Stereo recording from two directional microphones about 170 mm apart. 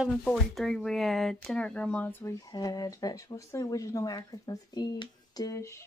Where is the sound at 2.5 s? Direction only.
20° left (ahead or behind).